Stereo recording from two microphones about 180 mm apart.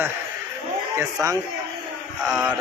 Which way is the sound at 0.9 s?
15° right (ahead or behind).